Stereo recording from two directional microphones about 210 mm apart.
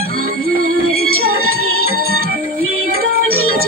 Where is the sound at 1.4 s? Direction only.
90° right.